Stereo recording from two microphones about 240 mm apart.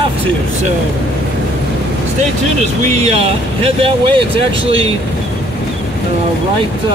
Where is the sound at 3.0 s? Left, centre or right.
Right.